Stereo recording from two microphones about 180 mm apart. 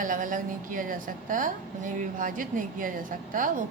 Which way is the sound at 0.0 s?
45° right (ahead or behind).